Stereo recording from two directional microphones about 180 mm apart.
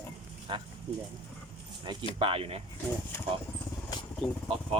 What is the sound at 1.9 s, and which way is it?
Speech, 25° right (ahead or behind).